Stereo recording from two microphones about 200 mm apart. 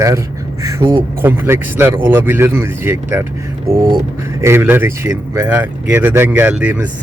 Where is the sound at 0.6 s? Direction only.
15° right (ahead or behind).